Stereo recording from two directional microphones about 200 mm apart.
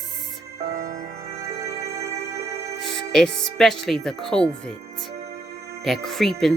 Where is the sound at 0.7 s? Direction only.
40° right (ahead or behind).